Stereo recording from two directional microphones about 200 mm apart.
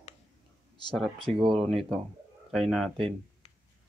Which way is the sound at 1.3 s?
Centre (ahead or behind).